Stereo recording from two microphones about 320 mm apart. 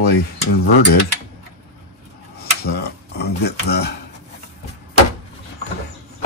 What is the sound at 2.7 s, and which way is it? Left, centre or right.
Speech, left.